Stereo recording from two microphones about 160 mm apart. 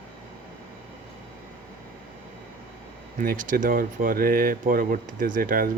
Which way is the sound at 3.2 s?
60° right (ahead or behind).